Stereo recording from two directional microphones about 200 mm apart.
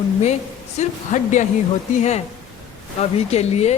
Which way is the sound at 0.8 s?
40° left (ahead or behind).